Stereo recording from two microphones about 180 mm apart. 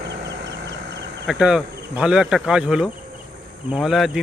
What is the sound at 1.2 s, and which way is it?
Speech, centre (ahead or behind).